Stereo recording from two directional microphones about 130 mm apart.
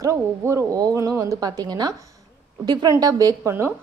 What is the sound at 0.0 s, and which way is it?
A woman's voice, 25° right (ahead or behind).